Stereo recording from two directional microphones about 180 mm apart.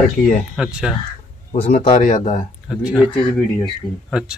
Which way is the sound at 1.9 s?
45° left (ahead or behind).